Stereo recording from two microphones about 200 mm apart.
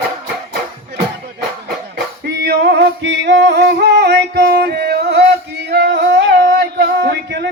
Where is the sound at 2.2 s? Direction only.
55° right (ahead or behind).